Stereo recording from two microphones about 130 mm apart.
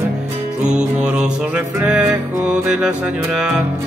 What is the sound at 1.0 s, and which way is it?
Music, 10° right (ahead or behind).